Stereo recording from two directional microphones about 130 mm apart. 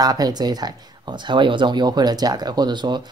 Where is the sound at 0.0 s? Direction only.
30° right (ahead or behind).